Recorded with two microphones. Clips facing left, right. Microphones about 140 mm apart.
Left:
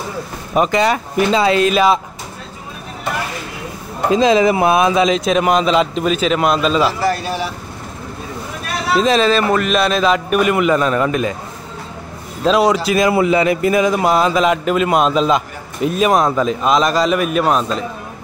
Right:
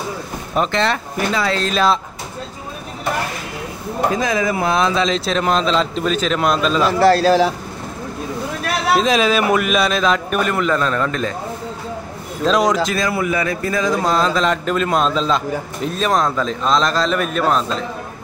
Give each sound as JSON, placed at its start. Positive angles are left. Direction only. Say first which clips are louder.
{"t": 0.6, "sound": "speech", "louder": "left 4 dB", "side_deg": 10}
{"t": 4.1, "sound": "speech", "louder": "left 10 dB", "side_deg": 20}
{"t": 6.9, "sound": "a man's voice", "louder": "right 6 dB", "side_deg": -70}
{"t": 8.9, "sound": "a man's voice", "louder": "left 3 dB", "side_deg": 0}
{"t": 12.4, "sound": "a man's voice", "louder": "left 3 dB", "side_deg": 5}
{"t": 12.9, "sound": "speech", "louder": "left 6 dB", "side_deg": 20}